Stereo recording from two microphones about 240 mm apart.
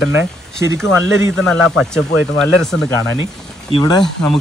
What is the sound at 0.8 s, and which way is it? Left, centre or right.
Speech, left.